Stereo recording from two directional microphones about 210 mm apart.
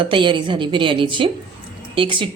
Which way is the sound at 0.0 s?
25° right (ahead or behind).